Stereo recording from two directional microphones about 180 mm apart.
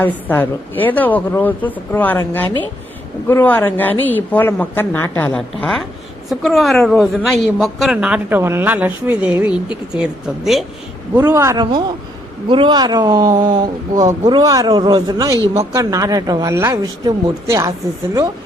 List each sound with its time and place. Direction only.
0.0 s a woman's voice: 10° left (ahead or behind)
11.3 s a man's voice: 15° right (ahead or behind)
12.5 s speech: 25° right (ahead or behind)